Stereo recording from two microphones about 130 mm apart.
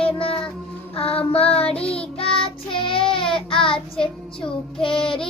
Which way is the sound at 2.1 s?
45° left (ahead or behind).